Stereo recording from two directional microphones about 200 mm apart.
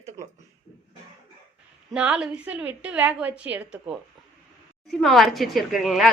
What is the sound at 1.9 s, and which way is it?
A woman's voice, 5° right (ahead or behind).